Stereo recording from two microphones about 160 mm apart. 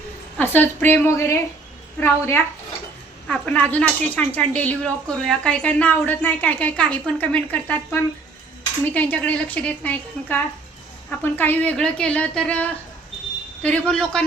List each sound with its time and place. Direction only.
0.3 s speech: 10° left (ahead or behind)